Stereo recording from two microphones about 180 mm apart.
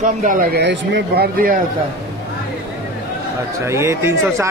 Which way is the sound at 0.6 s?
70° right (ahead or behind).